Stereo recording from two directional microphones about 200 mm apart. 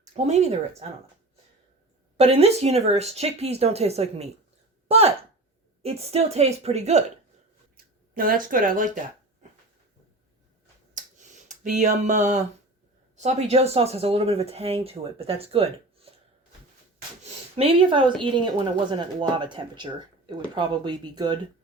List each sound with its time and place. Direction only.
0.0 s speech: 35° right (ahead or behind)
2.1 s speech: 30° right (ahead or behind)
8.1 s speech: 45° right (ahead or behind)
11.0 s a sound: 40° right (ahead or behind)
13.1 s speech: 35° right (ahead or behind)
17.6 s speech: 25° right (ahead or behind)